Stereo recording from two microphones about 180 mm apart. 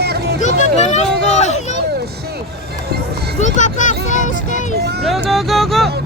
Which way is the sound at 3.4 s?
45° left (ahead or behind).